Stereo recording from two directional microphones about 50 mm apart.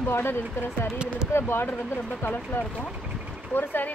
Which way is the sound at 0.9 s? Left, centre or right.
Right.